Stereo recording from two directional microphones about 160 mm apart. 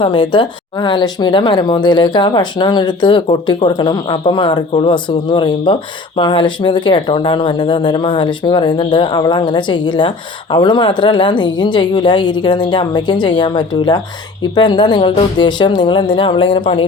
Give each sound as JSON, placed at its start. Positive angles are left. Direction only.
{"t": 0.0, "sound": "speech", "side_deg": 30}